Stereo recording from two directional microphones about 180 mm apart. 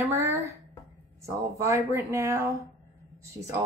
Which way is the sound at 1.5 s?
15° right (ahead or behind).